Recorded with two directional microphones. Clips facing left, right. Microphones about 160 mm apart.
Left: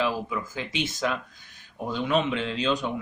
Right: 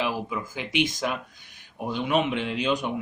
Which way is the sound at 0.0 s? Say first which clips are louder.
Left 1 dB; 15° right (ahead or behind).